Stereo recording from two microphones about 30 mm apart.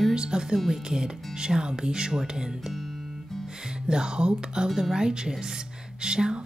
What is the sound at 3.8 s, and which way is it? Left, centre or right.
Speech, right.